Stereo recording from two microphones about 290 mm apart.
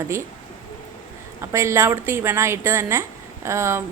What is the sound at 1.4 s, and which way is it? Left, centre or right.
A woman's voice, centre.